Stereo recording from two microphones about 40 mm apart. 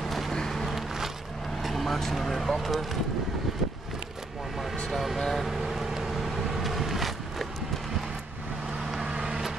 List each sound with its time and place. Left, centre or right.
0.0 s vehicle: centre
0.7 s a sound: centre
1.6 s vehicle: centre
2.1 s speech: centre
4.9 s vehicle: centre
8.9 s vehicle: centre